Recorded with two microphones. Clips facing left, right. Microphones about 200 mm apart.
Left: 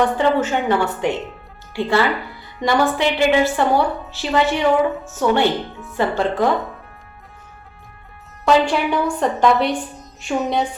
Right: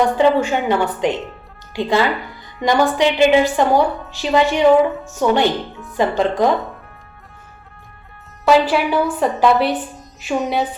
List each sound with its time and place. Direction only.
0.2 s a woman's voice: 15° right (ahead or behind)
8.4 s a woman's voice: 5° right (ahead or behind)